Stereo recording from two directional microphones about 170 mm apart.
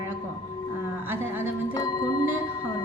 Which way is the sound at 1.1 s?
15° right (ahead or behind).